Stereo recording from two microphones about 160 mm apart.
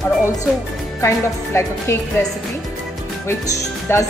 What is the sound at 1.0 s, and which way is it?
Speech, 15° left (ahead or behind).